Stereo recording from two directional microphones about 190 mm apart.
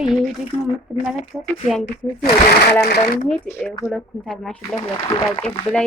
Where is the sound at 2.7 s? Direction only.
60° left (ahead or behind).